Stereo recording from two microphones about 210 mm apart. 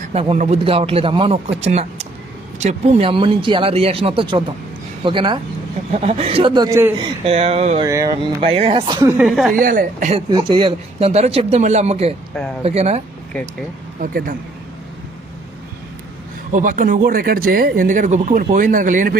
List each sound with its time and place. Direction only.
0.1 s speech: 30° right (ahead or behind); by 7.1 s 15° right (ahead or behind)
7.3 s speech: 30° right (ahead or behind)
7.9 s speech: 15° right (ahead or behind)
9.1 s speech: centre (ahead or behind)
9.5 s speech: 40° right (ahead or behind)
10.2 s speech: 20° right (ahead or behind)
13.3 s speech: 5° left (ahead or behind)
14.0 s speech: 40° right (ahead or behind)
16.5 s speech: 40° right (ahead or behind)